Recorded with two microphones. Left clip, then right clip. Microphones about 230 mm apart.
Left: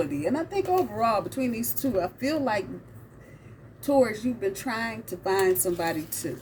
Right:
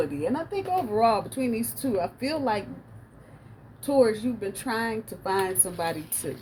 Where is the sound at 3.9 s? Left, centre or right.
Centre.